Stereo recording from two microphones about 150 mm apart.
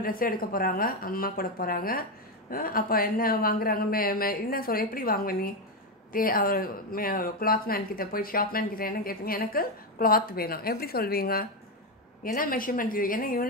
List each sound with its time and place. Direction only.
0.0 s speech: 75° left (ahead or behind)
12.2 s speech: 70° left (ahead or behind)